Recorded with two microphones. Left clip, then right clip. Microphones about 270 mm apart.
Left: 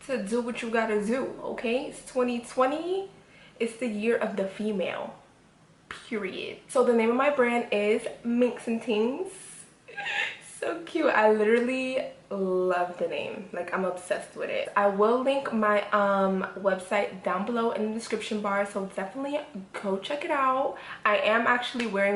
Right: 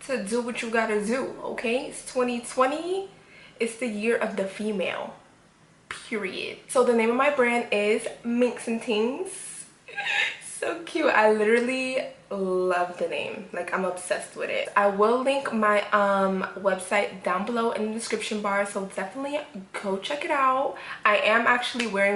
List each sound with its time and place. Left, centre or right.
0.1 s a woman's voice: centre
10.6 s a woman's voice: centre
12.3 s a woman's voice: centre